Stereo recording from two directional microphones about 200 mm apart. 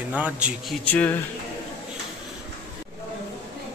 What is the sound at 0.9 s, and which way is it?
Speech, 10° left (ahead or behind).